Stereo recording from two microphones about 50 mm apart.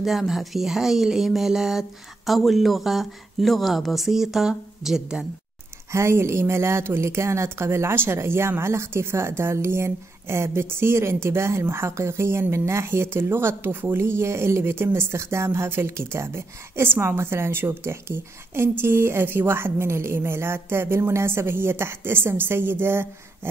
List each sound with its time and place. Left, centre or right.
0.0 s speech: centre
5.9 s a woman's voice: right